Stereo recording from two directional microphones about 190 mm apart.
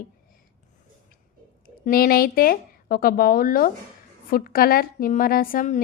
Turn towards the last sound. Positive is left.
turn(degrees=45)  # may be behind; listen again after turning